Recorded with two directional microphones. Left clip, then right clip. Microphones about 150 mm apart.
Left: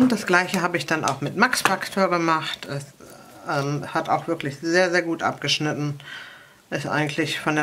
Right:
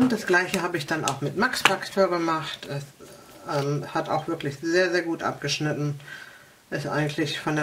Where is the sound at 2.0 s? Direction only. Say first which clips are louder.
Left 4 dB; 50° left (ahead or behind).